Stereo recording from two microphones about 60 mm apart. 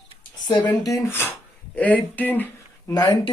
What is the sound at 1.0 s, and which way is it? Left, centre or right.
Speech, left.